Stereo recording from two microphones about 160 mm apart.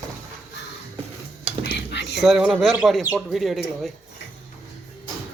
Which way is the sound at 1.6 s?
90° left.